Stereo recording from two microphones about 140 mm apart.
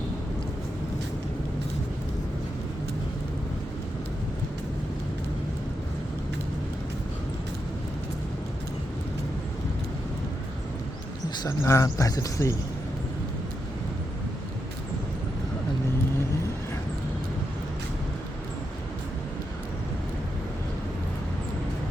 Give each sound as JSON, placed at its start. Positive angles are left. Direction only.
{"t": 11.4, "sound": "speech", "side_deg": 20}